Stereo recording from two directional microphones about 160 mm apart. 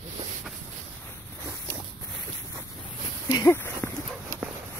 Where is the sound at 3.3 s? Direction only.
20° left (ahead or behind).